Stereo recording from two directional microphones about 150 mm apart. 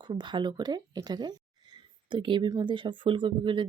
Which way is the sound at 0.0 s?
30° right (ahead or behind).